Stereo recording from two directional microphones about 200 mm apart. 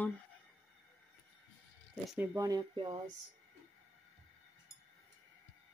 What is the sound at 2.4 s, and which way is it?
Speech, 20° right (ahead or behind).